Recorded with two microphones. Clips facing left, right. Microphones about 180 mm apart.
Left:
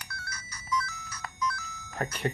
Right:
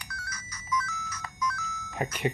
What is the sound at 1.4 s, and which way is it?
Telephone dialing, 30° left (ahead or behind).